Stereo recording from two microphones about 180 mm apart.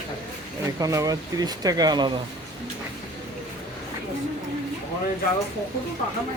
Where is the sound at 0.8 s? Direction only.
20° right (ahead or behind).